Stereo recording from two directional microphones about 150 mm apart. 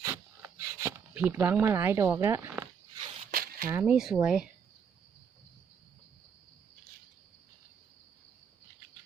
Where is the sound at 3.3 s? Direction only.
70° right (ahead or behind).